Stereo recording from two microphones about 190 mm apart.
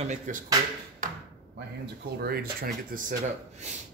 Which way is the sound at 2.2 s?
55° right (ahead or behind).